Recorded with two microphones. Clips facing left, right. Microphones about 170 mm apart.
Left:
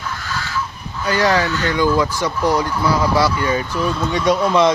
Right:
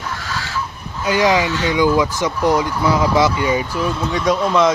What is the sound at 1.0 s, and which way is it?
Speech, 15° right (ahead or behind).